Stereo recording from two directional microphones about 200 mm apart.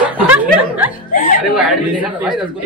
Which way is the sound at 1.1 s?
45° left (ahead or behind).